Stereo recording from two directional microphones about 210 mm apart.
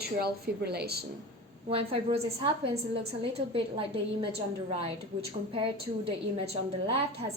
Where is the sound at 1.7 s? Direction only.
25° right (ahead or behind).